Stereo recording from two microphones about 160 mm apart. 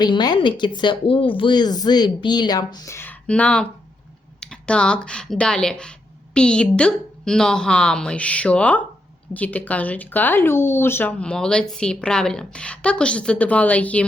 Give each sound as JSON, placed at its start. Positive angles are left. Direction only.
{"t": 0.0, "sound": "a woman's voice", "side_deg": 25}